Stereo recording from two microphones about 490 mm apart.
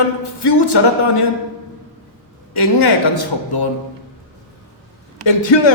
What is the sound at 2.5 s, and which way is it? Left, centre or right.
A man's voice, left.